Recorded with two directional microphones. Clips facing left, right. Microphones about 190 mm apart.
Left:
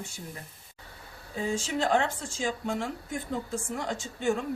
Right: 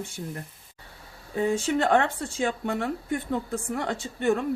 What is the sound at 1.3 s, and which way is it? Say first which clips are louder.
Speech: right 6 dB; 60° right (ahead or behind).